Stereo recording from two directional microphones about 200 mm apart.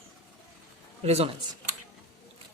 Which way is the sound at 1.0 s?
30° right (ahead or behind).